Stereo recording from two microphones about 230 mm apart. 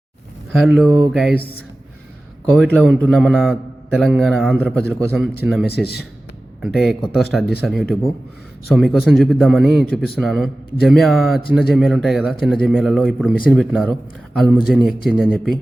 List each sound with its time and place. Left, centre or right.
0.6 s speech: centre
2.5 s speech: centre
5.1 s speech: centre
5.7 s speech: left
6.7 s speech: centre